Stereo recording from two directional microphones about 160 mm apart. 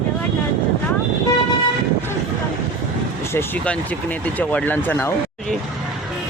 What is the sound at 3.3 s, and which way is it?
Speech, 10° left (ahead or behind).